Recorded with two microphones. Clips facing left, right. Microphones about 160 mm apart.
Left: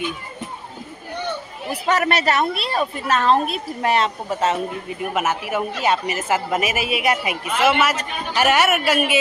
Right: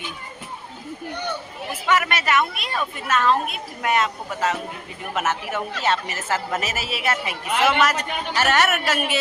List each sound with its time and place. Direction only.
1.7 s speech: 35° left (ahead or behind)
5.1 s a woman's voice: 10° left (ahead or behind)